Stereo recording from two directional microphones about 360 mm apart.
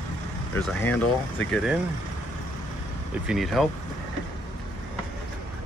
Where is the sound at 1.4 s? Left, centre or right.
Left.